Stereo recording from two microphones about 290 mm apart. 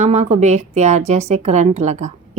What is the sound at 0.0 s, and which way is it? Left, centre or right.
A woman's voice, right.